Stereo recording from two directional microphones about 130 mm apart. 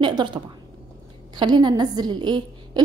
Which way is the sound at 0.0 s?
35° right (ahead or behind).